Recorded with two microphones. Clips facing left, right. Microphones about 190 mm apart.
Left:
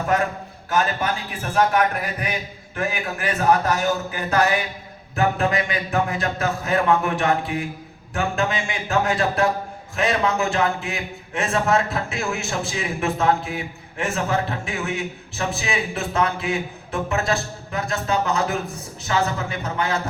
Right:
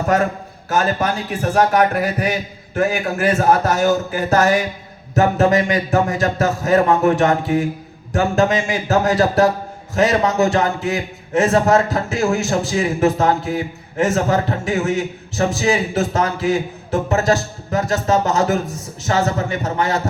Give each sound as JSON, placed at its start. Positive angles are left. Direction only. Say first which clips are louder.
{"t": 0.7, "sound": "a man's voice", "louder": "right 4 dB", "side_deg": -40}